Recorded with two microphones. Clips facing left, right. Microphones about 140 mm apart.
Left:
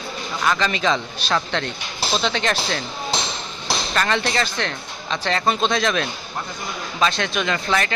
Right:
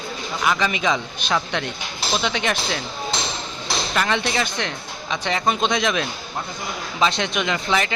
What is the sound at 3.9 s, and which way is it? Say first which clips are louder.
Speech: even; 10° right (ahead or behind).